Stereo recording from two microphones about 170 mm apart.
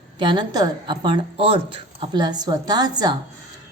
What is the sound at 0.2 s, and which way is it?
A woman's voice, 25° right (ahead or behind).